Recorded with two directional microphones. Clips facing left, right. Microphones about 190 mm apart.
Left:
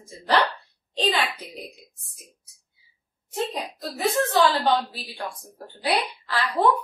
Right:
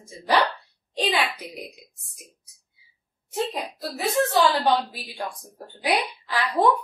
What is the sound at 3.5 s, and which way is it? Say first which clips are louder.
A woman's voice: right 1 dB; 10° right (ahead or behind).